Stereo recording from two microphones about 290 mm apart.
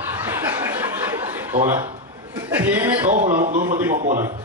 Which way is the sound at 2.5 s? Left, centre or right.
Centre.